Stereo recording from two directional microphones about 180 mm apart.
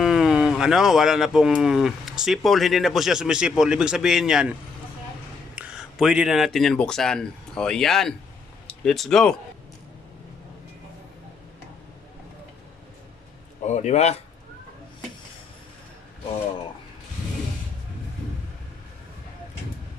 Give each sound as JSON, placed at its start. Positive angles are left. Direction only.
{"t": 0.0, "sound": "speech", "side_deg": 0}
{"t": 5.5, "sound": "speech", "side_deg": -5}
{"t": 13.7, "sound": "speech", "side_deg": 40}